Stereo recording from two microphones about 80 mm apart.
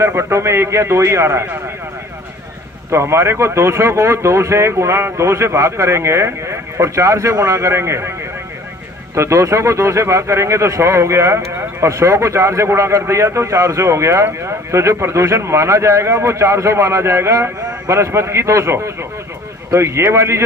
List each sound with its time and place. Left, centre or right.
0.0 s speech: right
2.9 s speech: right
9.1 s speech: right